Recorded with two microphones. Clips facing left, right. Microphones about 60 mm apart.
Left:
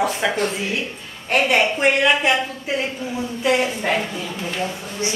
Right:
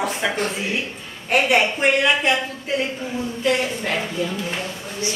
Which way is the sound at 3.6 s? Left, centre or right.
Centre.